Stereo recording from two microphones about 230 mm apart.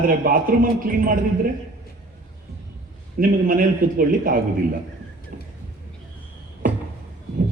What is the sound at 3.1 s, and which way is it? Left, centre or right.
A man's voice, right.